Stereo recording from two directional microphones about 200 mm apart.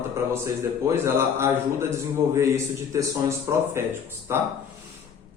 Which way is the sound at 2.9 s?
15° right (ahead or behind).